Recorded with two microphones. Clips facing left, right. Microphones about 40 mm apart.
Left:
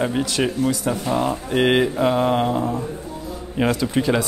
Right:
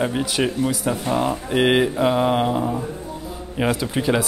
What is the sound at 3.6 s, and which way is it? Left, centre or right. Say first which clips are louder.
Speech: left 1 dB; centre.